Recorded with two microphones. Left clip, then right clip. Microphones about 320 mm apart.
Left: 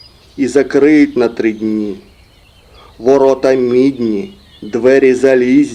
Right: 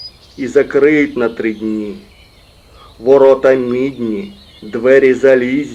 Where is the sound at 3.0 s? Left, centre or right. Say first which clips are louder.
Right 2 dB; left.